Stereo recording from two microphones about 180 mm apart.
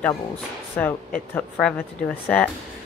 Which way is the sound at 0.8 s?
10° left (ahead or behind).